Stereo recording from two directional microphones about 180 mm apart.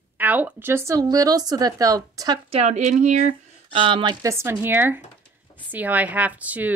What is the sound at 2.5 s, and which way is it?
Speech, 35° right (ahead or behind).